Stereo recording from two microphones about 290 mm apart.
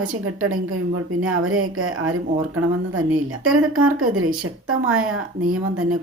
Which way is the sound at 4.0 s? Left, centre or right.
Right.